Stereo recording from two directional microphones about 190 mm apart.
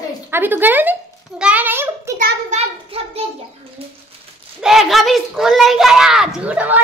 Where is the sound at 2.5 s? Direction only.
30° right (ahead or behind).